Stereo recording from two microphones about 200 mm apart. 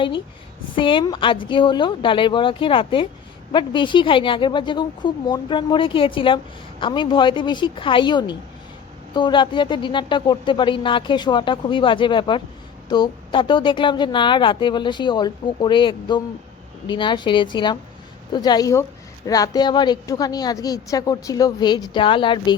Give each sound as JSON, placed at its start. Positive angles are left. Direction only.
{"t": 0.8, "sound": "a woman's voice", "side_deg": 25}